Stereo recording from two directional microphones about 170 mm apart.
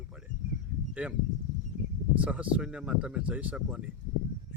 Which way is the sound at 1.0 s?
10° right (ahead or behind).